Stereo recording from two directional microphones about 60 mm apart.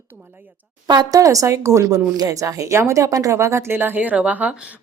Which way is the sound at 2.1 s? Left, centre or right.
Right.